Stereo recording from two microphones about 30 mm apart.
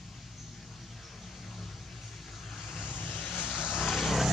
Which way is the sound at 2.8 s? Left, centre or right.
Left.